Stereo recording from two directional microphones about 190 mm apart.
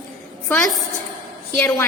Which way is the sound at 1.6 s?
10° left (ahead or behind).